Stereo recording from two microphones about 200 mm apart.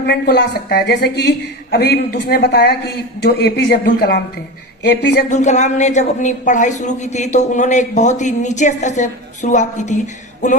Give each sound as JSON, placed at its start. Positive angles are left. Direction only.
{"t": 0.0, "sound": "a woman's voice", "side_deg": 55}
{"t": 5.3, "sound": "a woman's voice", "side_deg": 35}